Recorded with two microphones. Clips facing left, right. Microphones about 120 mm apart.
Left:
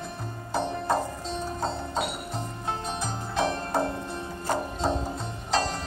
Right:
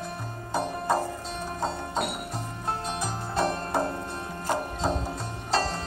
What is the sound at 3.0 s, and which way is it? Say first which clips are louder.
Music: even; 5° right (ahead or behind).